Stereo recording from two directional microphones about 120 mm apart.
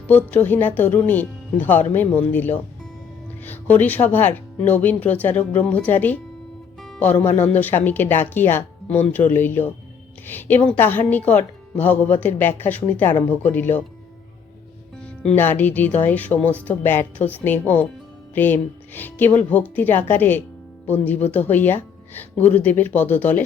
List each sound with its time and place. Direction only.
0.1 s speech: 15° left (ahead or behind)
15.0 s music: 5° left (ahead or behind)
15.4 s speech: 15° left (ahead or behind)